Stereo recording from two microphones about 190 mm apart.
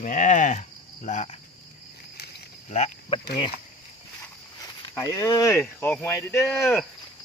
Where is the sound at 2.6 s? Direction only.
35° left (ahead or behind).